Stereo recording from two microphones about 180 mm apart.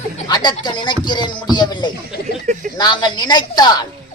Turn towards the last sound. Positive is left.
turn(degrees=20)  # may be behind; listen again after turning